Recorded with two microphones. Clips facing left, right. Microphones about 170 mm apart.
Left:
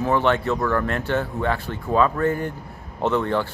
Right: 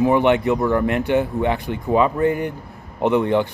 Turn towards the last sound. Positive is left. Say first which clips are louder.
# right 4 dB
turn(degrees=-15)  # may be behind; listen again after turning